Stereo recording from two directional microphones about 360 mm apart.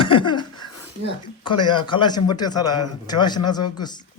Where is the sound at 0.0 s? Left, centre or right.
Centre.